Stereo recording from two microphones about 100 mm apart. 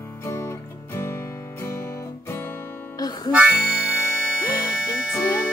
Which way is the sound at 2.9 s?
40° left (ahead or behind).